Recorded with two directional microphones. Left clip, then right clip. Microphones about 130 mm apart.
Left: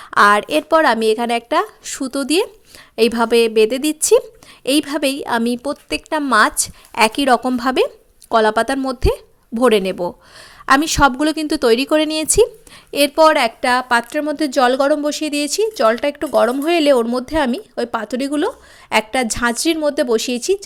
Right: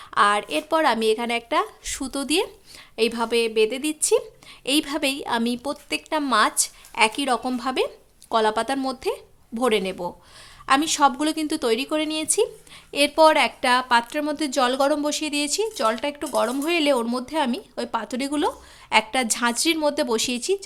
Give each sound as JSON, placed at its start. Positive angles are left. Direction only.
{"t": 0.0, "sound": "a woman's voice", "side_deg": 50}
{"t": 0.7, "sound": "a woman's voice", "side_deg": 40}
{"t": 2.9, "sound": "speech", "side_deg": 45}
{"t": 4.6, "sound": "a woman's voice", "side_deg": 35}
{"t": 12.9, "sound": "a woman's voice", "side_deg": 35}